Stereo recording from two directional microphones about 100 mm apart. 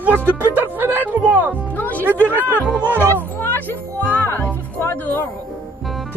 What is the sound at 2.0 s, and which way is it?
Speech, 20° right (ahead or behind).